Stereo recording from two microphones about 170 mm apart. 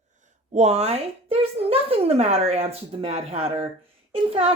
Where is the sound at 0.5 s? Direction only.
40° right (ahead or behind).